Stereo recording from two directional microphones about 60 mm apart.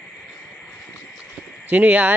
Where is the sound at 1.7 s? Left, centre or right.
Right.